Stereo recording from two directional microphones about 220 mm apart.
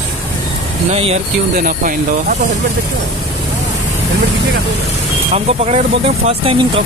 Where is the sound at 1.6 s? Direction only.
40° right (ahead or behind).